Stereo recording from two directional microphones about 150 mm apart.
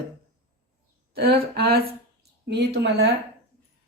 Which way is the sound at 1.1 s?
90° right.